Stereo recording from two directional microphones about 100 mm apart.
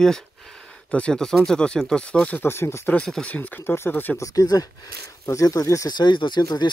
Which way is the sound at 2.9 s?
10° left (ahead or behind).